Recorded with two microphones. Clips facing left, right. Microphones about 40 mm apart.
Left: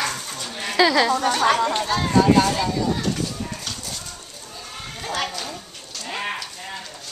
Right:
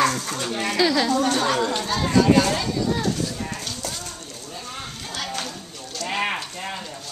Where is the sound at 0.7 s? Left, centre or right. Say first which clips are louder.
Left 3 dB; left.